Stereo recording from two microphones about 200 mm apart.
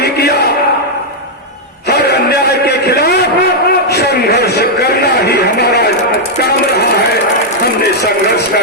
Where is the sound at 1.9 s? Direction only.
55° left (ahead or behind).